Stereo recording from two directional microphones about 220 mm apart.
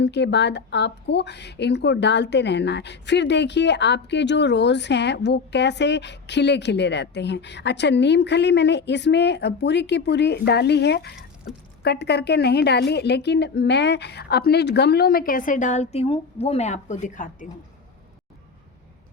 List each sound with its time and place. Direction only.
0.0 s speech: 50° left (ahead or behind); by 17.5 s 35° left (ahead or behind)